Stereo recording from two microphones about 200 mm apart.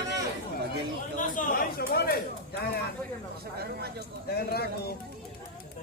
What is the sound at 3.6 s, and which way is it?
Speech, 50° right (ahead or behind).